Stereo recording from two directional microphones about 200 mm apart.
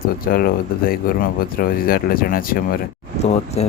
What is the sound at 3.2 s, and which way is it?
Speech, 30° left (ahead or behind).